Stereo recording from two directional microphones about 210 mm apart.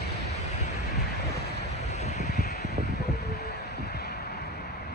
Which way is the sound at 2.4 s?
50° left (ahead or behind).